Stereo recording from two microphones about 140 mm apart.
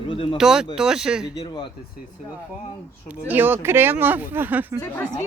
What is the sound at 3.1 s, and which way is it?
Speech, 15° right (ahead or behind).